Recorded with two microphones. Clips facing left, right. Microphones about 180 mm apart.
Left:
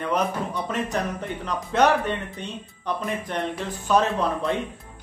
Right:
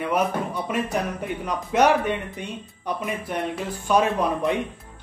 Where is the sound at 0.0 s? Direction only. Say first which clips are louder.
Right 1 dB; 10° right (ahead or behind).